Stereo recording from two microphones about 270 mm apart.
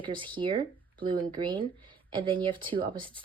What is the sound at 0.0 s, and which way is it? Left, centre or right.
Speech, centre.